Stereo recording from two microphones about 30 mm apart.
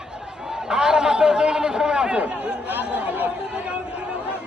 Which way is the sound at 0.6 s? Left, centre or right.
Right.